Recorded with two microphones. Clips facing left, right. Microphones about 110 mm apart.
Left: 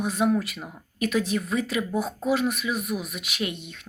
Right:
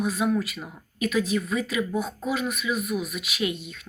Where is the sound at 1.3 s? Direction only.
45° left (ahead or behind).